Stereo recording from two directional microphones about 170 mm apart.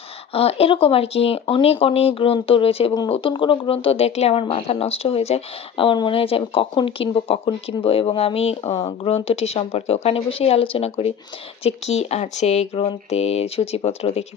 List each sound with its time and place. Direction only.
0.3 s speech: 35° left (ahead or behind)